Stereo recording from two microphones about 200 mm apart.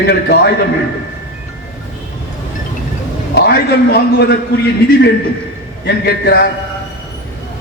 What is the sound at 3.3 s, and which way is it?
A man's voice, 55° left (ahead or behind).